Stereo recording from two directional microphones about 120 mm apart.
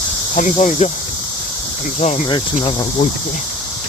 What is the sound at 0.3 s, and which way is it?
Speech, 90° left.